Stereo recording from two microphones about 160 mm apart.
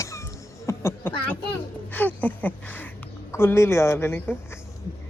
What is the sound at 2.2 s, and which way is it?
Speech, 10° left (ahead or behind).